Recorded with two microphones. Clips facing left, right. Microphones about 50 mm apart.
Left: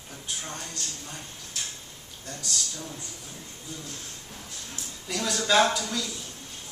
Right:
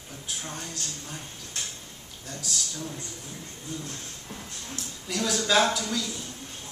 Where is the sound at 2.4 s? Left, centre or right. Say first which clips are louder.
Right 1 dB; centre.